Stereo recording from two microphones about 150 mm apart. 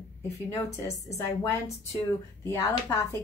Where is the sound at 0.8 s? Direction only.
20° left (ahead or behind).